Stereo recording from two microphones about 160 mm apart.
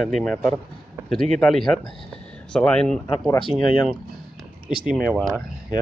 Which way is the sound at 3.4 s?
30° left (ahead or behind).